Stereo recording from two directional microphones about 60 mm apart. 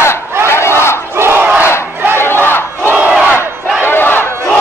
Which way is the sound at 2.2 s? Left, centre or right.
Left.